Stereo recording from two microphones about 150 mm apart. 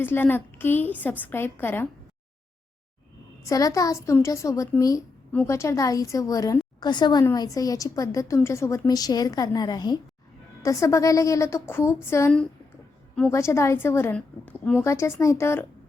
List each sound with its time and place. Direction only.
0.0 s a woman's voice: 15° left (ahead or behind)
3.4 s a woman's voice: 20° left (ahead or behind)
13.3 s a woman's voice: 20° left (ahead or behind)